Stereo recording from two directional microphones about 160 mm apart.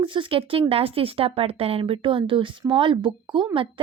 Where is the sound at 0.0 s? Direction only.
30° right (ahead or behind).